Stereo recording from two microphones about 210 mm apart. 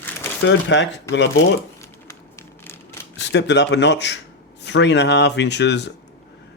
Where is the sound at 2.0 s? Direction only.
15° left (ahead or behind).